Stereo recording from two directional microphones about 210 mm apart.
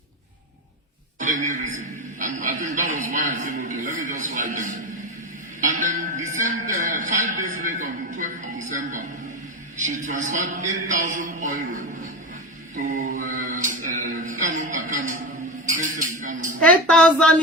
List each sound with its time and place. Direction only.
1.2 s speech: 35° right (ahead or behind)
12.7 s mantra: 35° right (ahead or behind)
15.7 s music: 35° right (ahead or behind)
16.6 s a sound: 5° left (ahead or behind)